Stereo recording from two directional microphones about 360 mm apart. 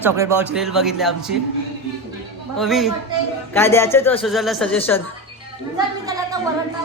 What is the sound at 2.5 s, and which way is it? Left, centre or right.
Speech, centre.